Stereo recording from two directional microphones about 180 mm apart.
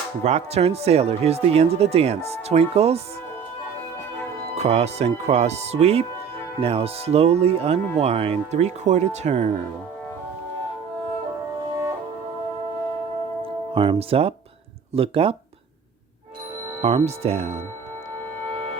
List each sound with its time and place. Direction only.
0.3 s speech: 35° right (ahead or behind)
4.5 s speech: 35° right (ahead or behind)
13.4 s speech: 30° right (ahead or behind)
16.8 s speech: 35° right (ahead or behind)